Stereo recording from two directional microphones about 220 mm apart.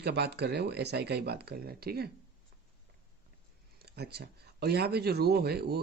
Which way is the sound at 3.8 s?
45° right (ahead or behind).